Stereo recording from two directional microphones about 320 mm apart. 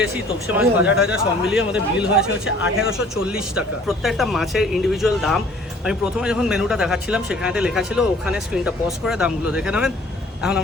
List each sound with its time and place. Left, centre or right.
0.5 s speech: centre